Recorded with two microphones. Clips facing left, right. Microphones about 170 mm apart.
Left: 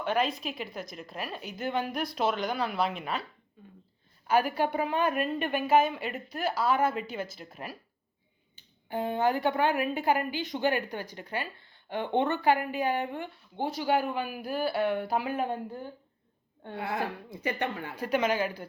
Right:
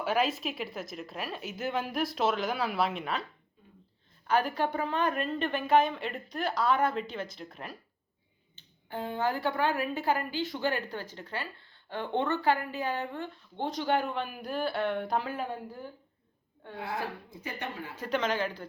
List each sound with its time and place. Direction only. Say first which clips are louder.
0.0 s a woman's voice: even; 5° right (ahead or behind)
4.3 s a woman's voice: left 2 dB; 10° left (ahead or behind)
16.7 s a woman's voice: left 3 dB; 65° left (ahead or behind)
17.9 s a woman's voice: left 2 dB; 10° left (ahead or behind)